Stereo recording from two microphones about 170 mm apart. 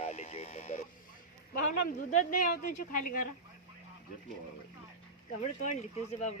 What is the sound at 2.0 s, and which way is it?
Speech, 50° left (ahead or behind).